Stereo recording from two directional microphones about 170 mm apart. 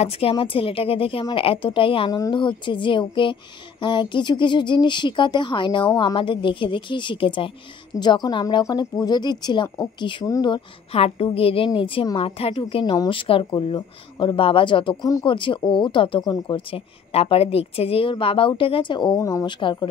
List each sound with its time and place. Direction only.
0.0 s a woman's voice: 35° left (ahead or behind)